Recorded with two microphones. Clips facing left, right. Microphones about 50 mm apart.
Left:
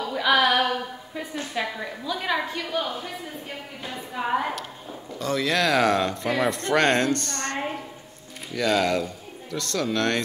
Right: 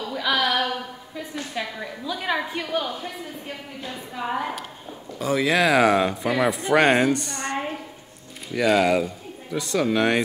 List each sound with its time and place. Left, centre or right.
0.0 s music: centre
1.5 s a woman's voice: centre
2.7 s speech: right
3.8 s a woman's voice: centre
5.2 s speech: centre